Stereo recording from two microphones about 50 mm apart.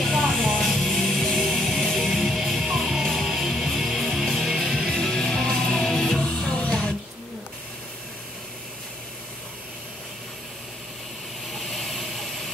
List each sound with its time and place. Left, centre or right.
0.0 s music: centre
4.9 s music: centre
6.2 s music: centre
11.6 s vehicle: centre